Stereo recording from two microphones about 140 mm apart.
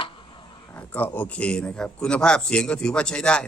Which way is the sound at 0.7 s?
10° left (ahead or behind).